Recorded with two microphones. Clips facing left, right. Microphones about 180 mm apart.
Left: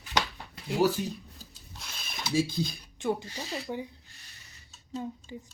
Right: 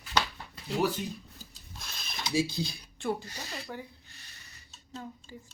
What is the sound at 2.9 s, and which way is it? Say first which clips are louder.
Speech: left 3 dB; 15° left (ahead or behind).